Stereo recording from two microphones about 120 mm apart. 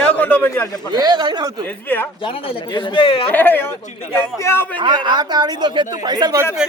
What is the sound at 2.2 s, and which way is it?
A man's voice, 50° left (ahead or behind).